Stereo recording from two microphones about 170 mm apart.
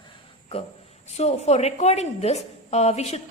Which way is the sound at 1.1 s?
40° left (ahead or behind).